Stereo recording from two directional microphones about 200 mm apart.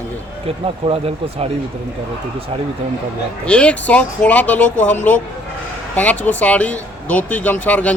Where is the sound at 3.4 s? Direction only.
5° left (ahead or behind).